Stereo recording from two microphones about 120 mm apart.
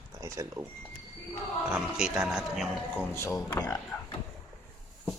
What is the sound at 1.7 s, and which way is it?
Speech, 5° right (ahead or behind).